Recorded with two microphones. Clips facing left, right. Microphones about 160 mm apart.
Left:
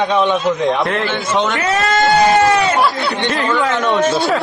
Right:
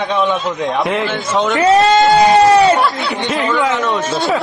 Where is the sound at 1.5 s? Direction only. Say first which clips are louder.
Right 6 dB; 35° right (ahead or behind).